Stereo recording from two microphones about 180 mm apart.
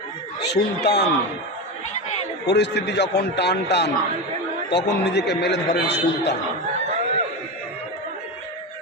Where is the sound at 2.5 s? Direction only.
70° left (ahead or behind).